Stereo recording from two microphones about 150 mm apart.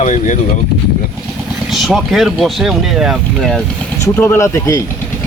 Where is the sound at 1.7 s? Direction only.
Centre (ahead or behind).